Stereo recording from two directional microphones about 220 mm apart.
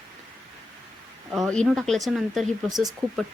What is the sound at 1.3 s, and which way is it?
Speech, centre (ahead or behind).